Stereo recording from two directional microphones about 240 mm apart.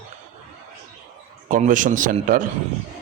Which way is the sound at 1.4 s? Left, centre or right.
Right.